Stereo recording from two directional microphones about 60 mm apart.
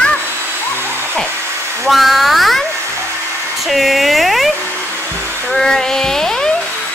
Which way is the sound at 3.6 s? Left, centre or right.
Centre.